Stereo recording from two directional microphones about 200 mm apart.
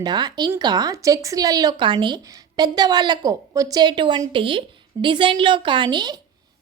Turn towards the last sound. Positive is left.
turn(degrees=-20)  # may be behind; listen again after turning